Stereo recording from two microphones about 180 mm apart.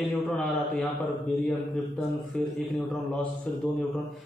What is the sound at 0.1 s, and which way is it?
Speech, 5° left (ahead or behind).